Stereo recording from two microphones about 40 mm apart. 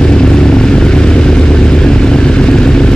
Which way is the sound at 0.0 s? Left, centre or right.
Left.